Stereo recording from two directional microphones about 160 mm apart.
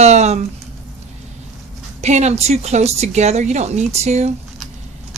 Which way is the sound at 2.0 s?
45° right (ahead or behind).